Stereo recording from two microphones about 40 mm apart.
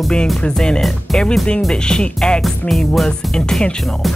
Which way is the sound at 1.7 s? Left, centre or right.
Left.